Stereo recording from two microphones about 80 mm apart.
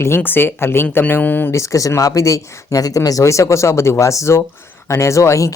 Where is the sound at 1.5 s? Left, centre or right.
Left.